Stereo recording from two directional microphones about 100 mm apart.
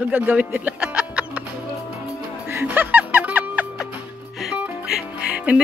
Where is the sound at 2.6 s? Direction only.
20° right (ahead or behind).